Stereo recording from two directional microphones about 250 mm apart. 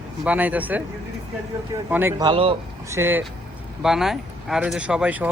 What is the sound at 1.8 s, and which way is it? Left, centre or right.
Speech, centre.